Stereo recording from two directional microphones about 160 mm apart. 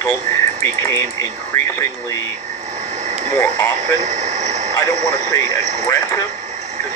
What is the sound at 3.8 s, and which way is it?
Speech, 45° right (ahead or behind).